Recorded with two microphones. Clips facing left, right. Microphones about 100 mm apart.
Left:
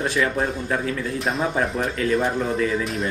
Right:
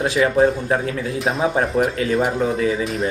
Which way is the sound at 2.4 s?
50° right (ahead or behind).